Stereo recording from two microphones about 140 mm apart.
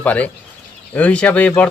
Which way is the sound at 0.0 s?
10° left (ahead or behind).